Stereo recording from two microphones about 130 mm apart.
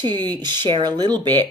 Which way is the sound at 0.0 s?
35° right (ahead or behind).